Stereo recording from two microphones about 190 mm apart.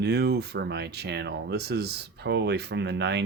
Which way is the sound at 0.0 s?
60° right (ahead or behind).